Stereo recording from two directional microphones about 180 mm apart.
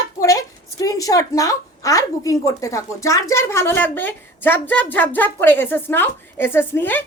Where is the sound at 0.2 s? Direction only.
20° left (ahead or behind).